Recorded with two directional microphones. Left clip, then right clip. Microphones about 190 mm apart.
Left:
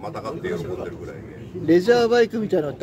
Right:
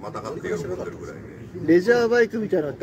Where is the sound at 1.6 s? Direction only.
20° left (ahead or behind).